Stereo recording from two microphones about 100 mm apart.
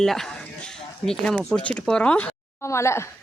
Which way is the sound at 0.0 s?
5° left (ahead or behind).